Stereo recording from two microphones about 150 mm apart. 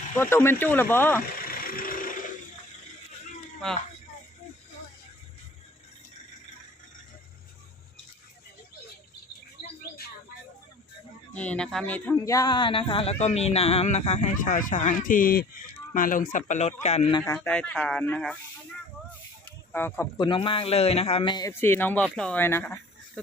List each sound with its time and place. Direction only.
0.2 s speech: 15° left (ahead or behind)
1.5 s vehicle: 75° left (ahead or behind)
11.3 s speech: 10° left (ahead or behind); by 15.4 s 75° left (ahead or behind)
16.0 s speech: 65° left (ahead or behind)
16.5 s speech: 50° left (ahead or behind)
17.2 s speech: 15° left (ahead or behind)
19.7 s speech: 15° left (ahead or behind)
20.1 s a man's voice: 35° left (ahead or behind)
21.5 s speech: 15° left (ahead or behind)